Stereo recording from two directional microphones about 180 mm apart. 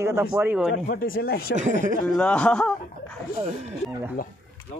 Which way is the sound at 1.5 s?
40° right (ahead or behind).